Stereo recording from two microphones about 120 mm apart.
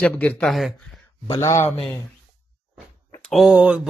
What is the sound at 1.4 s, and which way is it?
Speech, 25° left (ahead or behind).